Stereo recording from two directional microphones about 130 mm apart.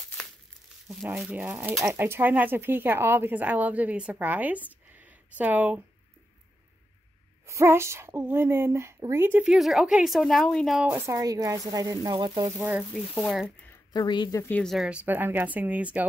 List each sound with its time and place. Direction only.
1.1 s speech: 10° right (ahead or behind)
7.4 s speech: 20° right (ahead or behind)
9.4 s a woman's voice: 5° right (ahead or behind)
10.9 s speech: 20° right (ahead or behind)
13.9 s speech: 35° left (ahead or behind)
14.5 s speech: 5° left (ahead or behind)